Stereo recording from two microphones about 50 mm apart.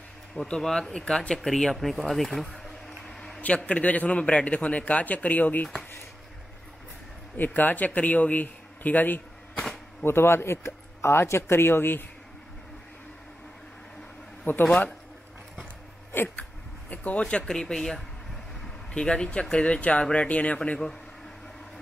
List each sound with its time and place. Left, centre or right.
0.4 s speech: centre
1.5 s a sound: centre
3.3 s a man's voice: left
7.3 s speech: left
10.0 s speech: left
14.5 s speech: left
16.9 s a sound: left
17.2 s a man's voice: centre